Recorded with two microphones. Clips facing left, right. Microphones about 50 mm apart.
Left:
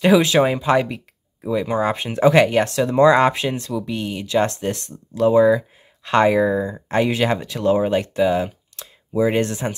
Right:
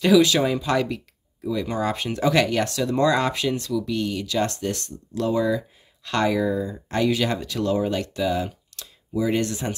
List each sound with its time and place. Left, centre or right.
0.0 s speech: left